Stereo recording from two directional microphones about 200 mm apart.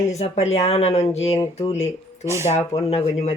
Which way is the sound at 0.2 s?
30° left (ahead or behind).